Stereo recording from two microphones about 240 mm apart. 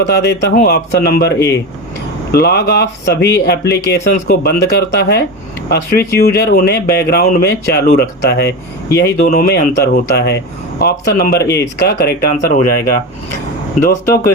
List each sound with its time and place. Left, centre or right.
0.1 s a man's voice: left
2.3 s a man's voice: left
13.8 s speech: left